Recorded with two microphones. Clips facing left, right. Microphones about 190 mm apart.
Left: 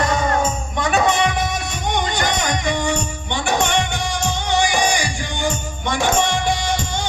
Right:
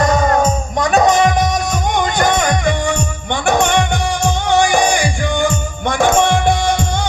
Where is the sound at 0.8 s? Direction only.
40° right (ahead or behind).